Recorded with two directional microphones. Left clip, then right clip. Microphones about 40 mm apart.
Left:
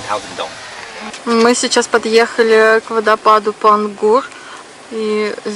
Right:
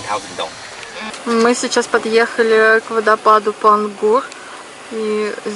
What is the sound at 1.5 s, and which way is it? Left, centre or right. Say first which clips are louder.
Speech: left 2 dB; centre.